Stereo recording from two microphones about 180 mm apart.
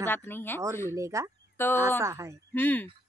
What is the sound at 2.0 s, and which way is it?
Speech, 15° right (ahead or behind).